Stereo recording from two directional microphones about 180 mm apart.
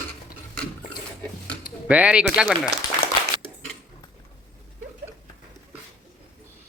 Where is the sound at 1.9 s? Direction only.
5° right (ahead or behind).